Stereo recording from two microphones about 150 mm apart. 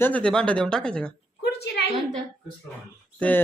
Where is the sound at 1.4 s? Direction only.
90° left.